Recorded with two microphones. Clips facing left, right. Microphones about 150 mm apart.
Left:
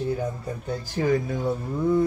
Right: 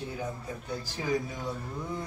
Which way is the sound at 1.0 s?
60° left (ahead or behind).